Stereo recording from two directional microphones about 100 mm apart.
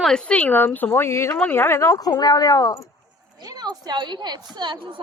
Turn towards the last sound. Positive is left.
turn(degrees=-55)  # may be behind; listen again after turning